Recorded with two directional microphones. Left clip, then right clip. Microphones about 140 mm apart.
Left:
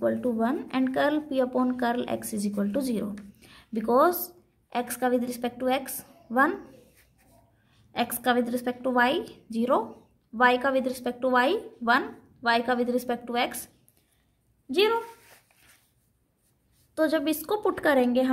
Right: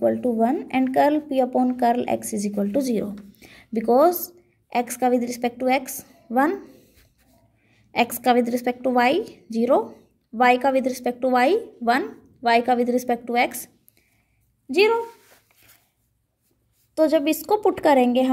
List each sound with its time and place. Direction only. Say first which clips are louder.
0.0 s a woman's voice: right 6 dB; 25° right (ahead or behind)
7.9 s a woman's voice: right 6 dB; 40° right (ahead or behind)
14.7 s a woman's voice: right 5 dB; 45° right (ahead or behind)
16.9 s a woman's voice: right 6 dB; 25° right (ahead or behind)